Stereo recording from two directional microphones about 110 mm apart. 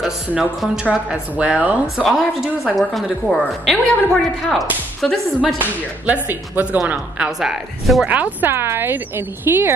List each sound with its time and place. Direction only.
0.3 s a woman's voice: 5° right (ahead or behind)
6.2 s a woman's voice: 15° right (ahead or behind)
8.1 s speech: 15° right (ahead or behind)